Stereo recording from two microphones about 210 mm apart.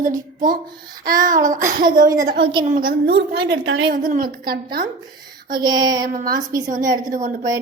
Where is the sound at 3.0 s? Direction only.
50° right (ahead or behind).